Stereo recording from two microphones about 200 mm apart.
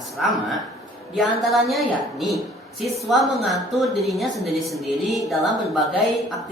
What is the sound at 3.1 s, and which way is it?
A woman's voice, centre (ahead or behind).